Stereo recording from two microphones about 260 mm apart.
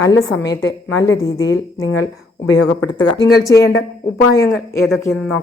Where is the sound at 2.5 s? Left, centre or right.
Left.